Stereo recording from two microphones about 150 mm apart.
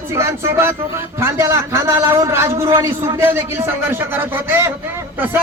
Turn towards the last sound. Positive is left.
turn(degrees=-10)  # may be behind; listen again after turning